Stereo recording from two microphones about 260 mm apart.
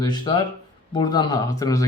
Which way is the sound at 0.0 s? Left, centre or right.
Centre.